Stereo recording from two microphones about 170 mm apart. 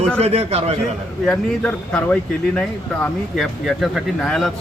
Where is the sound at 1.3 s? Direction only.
5° left (ahead or behind).